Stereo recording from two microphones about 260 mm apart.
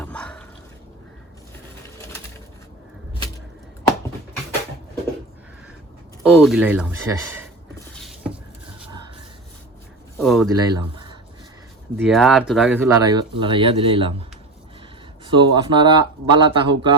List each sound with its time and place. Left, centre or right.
0.0 s a sound: centre
6.2 s speech: centre
10.2 s speech: centre
10.5 s speech: centre
11.9 s speech: centre
13.0 s speech: centre